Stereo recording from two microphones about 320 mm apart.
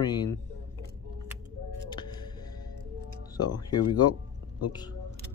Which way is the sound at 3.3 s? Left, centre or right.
Centre.